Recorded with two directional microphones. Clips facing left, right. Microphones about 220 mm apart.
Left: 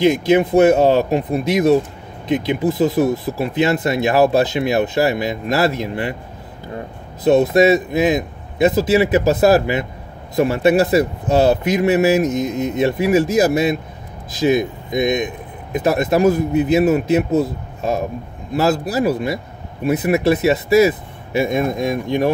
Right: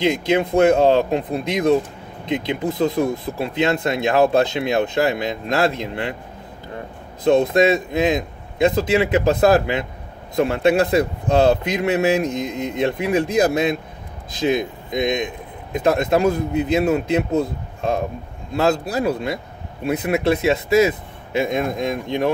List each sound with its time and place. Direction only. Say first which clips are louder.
0.0 s speech: left 5 dB; 5° left (ahead or behind)
7.2 s speech: left 3 dB; 5° left (ahead or behind)